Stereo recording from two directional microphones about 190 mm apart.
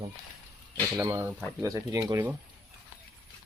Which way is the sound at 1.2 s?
5° right (ahead or behind).